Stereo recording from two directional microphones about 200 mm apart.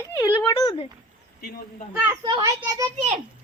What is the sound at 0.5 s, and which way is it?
Speech, 25° left (ahead or behind).